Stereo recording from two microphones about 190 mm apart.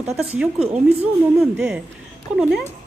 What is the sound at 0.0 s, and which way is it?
Speech, 5° right (ahead or behind).